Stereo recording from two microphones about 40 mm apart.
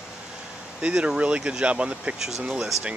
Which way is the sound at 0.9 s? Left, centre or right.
Right.